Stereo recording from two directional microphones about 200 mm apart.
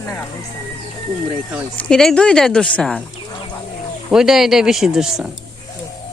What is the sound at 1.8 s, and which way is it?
Speech, 5° left (ahead or behind).